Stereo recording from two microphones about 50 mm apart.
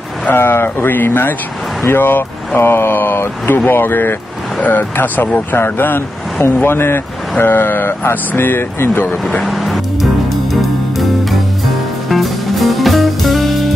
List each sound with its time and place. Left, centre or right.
0.3 s speech: left
9.4 s music: centre
12.1 s music: centre